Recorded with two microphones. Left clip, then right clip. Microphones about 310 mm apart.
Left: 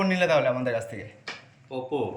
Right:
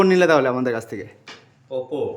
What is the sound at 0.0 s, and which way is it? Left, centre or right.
Speech, centre.